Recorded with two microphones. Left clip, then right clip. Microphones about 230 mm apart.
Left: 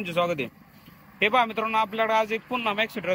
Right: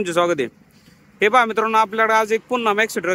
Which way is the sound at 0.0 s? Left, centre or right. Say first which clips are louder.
Right 7 dB; centre.